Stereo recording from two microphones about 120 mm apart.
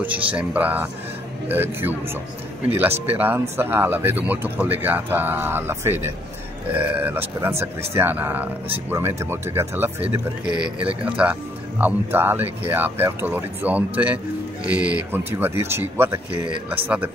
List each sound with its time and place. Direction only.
0.0 s speech: 10° right (ahead or behind)
10.4 s speech: 10° right (ahead or behind)